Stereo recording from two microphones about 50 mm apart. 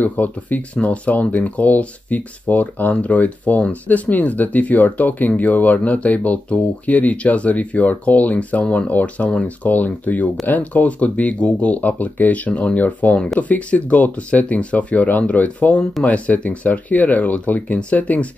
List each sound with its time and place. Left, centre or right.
0.0 s speech: left